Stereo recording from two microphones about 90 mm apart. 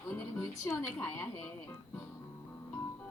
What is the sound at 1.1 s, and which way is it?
Speech, 30° left (ahead or behind).